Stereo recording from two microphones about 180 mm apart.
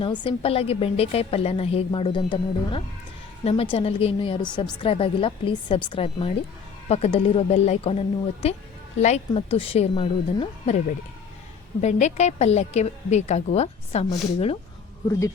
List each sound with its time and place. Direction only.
0.0 s a woman's voice: 25° left (ahead or behind)
11.8 s a woman's voice: 40° left (ahead or behind)